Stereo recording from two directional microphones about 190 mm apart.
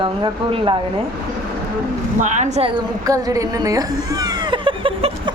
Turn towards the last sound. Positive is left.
turn(degrees=-25)  # may be behind; listen again after turning